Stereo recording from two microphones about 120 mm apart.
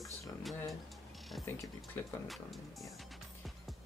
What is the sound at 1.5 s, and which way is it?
Speech, 15° left (ahead or behind).